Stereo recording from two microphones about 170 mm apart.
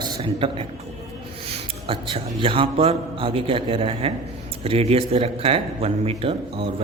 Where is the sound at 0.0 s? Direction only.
30° right (ahead or behind).